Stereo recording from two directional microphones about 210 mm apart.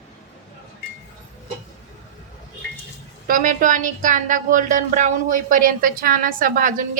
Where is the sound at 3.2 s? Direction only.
40° right (ahead or behind).